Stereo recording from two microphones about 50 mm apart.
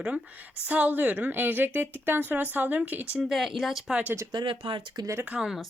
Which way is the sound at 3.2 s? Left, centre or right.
Centre.